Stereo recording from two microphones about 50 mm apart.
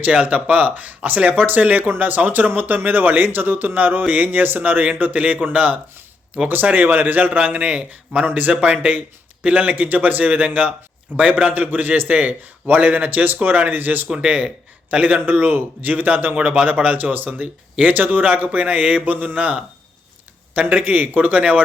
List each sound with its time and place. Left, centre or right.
0.0 s a man's voice: right
14.3 s a man's voice: right
16.4 s a man's voice: right